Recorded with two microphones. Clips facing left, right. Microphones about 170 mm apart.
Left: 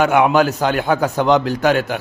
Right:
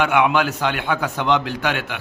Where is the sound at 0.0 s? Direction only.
40° left (ahead or behind).